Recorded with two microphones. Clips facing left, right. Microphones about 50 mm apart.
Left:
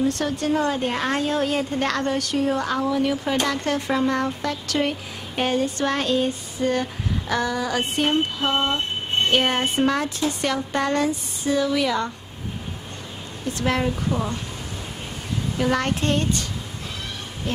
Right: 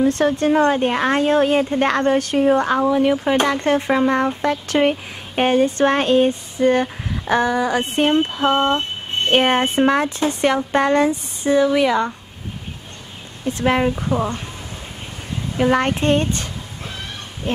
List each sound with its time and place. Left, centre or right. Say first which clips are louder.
0.0 s a woman's voice: right 6 dB; right
13.5 s speech: right 5 dB; right
15.5 s speech: right 6 dB; right